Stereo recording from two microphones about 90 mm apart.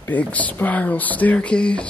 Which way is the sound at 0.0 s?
15° left (ahead or behind).